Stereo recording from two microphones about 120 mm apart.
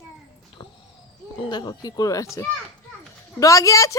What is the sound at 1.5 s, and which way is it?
Speech, 35° left (ahead or behind).